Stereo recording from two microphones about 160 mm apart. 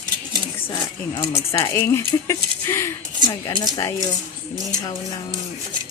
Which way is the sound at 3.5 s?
25° left (ahead or behind).